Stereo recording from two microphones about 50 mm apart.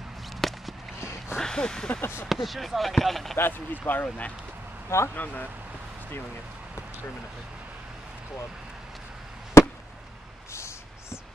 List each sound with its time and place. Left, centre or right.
0.4 s walk: centre
0.9 s a sound: left
1.4 s a sound: centre
2.0 s speech: left
2.2 s speech: centre
3.3 s speech: left
4.8 s speech: left
5.1 s speech: left
10.5 s a sound: left